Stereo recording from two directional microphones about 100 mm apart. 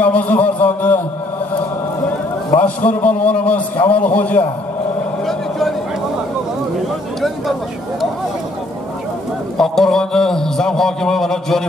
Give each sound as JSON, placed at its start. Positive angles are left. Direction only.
{"t": 0.0, "sound": "a sound", "side_deg": 15}
{"t": 2.6, "sound": "a man's voice", "side_deg": 15}
{"t": 5.2, "sound": "vehicle", "side_deg": 0}
{"t": 7.2, "sound": "a man's voice", "side_deg": 0}
{"t": 9.6, "sound": "a man's voice", "side_deg": 5}